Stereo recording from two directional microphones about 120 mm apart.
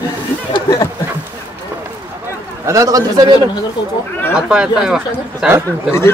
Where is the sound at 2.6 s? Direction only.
30° right (ahead or behind).